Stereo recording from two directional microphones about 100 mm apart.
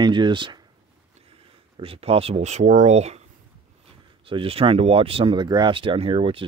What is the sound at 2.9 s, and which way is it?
Speech, 90° right.